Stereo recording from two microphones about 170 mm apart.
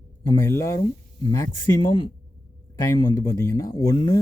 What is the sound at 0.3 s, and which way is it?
Speech, 15° left (ahead or behind).